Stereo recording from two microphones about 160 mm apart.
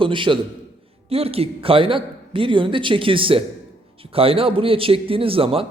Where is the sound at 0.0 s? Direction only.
30° right (ahead or behind).